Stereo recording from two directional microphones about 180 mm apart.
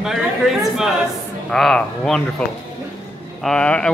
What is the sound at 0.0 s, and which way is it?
Speech, centre (ahead or behind).